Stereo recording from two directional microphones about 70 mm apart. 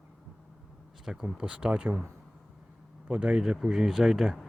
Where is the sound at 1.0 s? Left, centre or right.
Centre.